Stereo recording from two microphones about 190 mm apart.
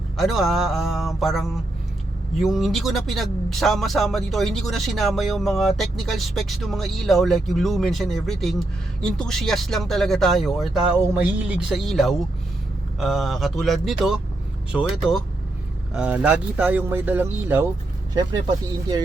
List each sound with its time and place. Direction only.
0.2 s speech: centre (ahead or behind)
18.1 s speech: 20° right (ahead or behind)